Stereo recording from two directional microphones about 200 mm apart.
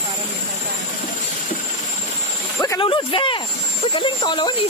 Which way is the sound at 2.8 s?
25° left (ahead or behind).